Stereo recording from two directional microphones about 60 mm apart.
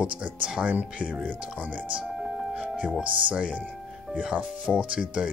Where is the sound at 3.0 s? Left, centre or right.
Right.